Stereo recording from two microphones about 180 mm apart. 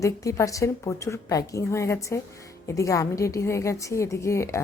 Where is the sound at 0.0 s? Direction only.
15° left (ahead or behind).